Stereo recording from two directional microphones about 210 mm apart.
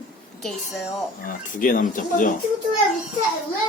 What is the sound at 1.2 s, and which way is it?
Speech, 40° left (ahead or behind).